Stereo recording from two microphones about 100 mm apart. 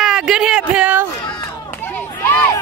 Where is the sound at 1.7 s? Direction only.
20° left (ahead or behind).